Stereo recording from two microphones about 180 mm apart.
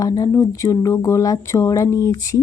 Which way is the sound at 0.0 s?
20° left (ahead or behind).